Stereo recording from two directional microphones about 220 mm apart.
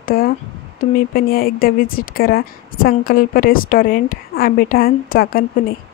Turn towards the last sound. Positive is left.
turn(degrees=40)  # may be behind; listen again after turning